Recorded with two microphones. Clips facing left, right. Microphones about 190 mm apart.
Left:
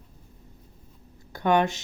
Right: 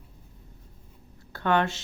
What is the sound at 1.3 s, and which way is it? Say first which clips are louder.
Speech: left 3 dB; 15° left (ahead or behind).